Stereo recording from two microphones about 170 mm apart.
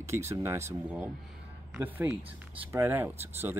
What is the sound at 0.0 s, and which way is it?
Speech, 15° right (ahead or behind).